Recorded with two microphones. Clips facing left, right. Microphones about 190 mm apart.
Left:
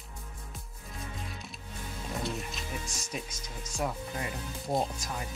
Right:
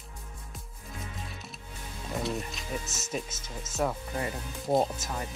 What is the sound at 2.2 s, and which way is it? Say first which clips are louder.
Music: right 4 dB; centre (ahead or behind).